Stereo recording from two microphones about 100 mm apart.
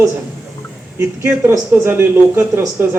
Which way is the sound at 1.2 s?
25° right (ahead or behind).